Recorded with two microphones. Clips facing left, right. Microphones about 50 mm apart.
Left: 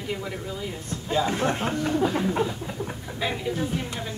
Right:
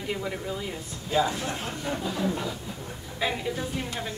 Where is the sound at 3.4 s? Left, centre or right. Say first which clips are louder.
Left 3 dB; centre.